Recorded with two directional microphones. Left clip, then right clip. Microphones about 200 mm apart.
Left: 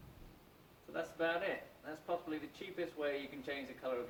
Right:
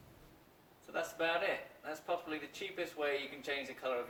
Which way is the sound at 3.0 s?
10° right (ahead or behind).